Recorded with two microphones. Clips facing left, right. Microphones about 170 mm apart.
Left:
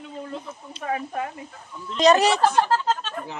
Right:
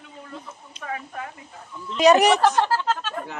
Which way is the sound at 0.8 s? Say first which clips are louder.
Left 5 dB; 30° left (ahead or behind).